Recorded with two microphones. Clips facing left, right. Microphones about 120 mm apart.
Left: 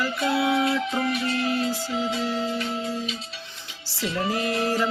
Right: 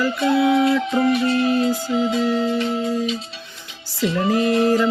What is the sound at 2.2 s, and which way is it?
Music, 65° right (ahead or behind).